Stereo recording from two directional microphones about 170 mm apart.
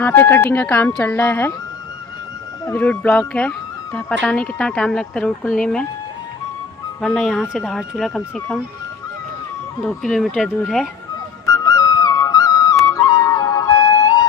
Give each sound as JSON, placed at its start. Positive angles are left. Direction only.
{"t": 0.0, "sound": "speech", "side_deg": 15}
{"t": 2.6, "sound": "speech", "side_deg": 10}
{"t": 7.0, "sound": "speech", "side_deg": 0}
{"t": 9.8, "sound": "speech", "side_deg": 5}
{"t": 11.4, "sound": "music", "side_deg": 20}
{"t": 12.8, "sound": "flute", "side_deg": 20}